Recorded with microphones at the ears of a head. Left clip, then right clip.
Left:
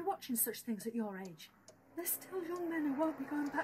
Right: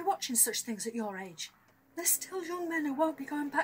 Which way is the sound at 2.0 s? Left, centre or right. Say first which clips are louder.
Right 7 dB; right.